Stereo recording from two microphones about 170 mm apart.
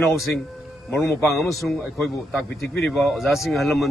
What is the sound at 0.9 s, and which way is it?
Speech, 15° left (ahead or behind).